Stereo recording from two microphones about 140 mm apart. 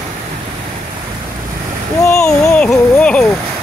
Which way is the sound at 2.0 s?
20° left (ahead or behind).